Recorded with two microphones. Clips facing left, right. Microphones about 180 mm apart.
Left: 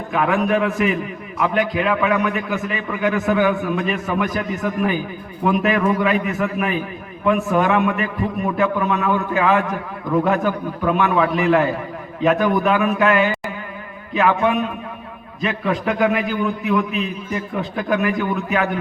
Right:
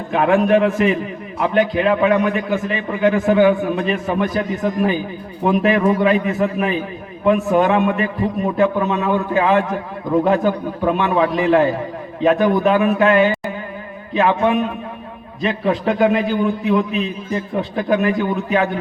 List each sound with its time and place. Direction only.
0.1 s a man's voice: 35° right (ahead or behind)